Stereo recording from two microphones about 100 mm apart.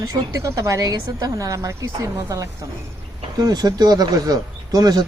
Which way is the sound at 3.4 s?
45° right (ahead or behind).